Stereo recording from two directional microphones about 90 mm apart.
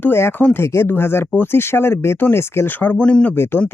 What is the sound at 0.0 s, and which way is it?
Speech, 25° left (ahead or behind).